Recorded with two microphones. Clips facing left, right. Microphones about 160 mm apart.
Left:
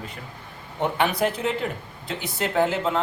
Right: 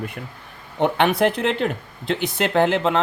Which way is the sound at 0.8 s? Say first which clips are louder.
Right 5 dB; 70° right (ahead or behind).